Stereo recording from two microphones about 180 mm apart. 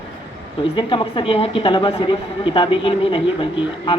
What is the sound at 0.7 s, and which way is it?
Speech, 25° left (ahead or behind).